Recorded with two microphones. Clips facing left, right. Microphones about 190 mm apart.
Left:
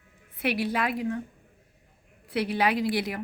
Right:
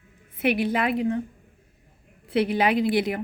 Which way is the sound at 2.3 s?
25° right (ahead or behind).